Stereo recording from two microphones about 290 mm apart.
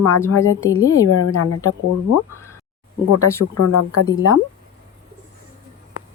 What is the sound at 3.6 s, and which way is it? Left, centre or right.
Speech, left.